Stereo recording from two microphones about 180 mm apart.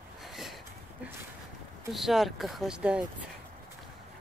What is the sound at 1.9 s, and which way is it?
Speech, centre (ahead or behind).